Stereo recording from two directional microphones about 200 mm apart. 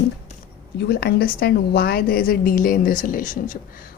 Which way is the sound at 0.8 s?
55° left (ahead or behind).